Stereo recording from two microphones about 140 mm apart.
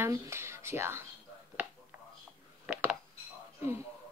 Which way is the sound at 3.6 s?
20° right (ahead or behind).